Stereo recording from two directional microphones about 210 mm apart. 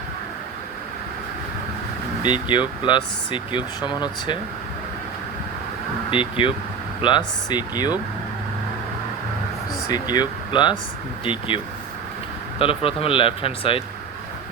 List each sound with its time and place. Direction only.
2.2 s speech: 20° left (ahead or behind)
6.1 s speech: 25° left (ahead or behind)
9.9 s speech: 20° left (ahead or behind)